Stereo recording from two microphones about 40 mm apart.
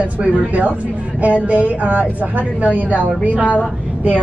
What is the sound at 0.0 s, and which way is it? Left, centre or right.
Speech, right.